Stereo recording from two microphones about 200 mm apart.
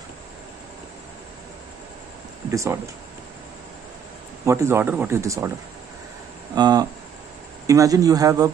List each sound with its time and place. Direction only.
2.5 s speech: 15° right (ahead or behind)
4.5 s speech: 15° right (ahead or behind)
6.5 s speech: 20° right (ahead or behind)